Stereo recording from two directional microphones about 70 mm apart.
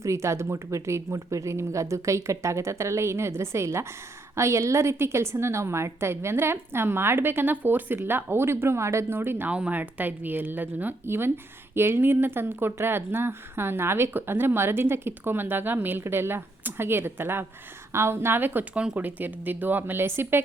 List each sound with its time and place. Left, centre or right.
0.0 s speech: right
9.5 s speech: centre